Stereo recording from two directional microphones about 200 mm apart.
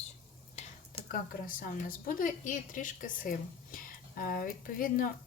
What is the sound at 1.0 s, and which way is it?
Speech, 45° left (ahead or behind).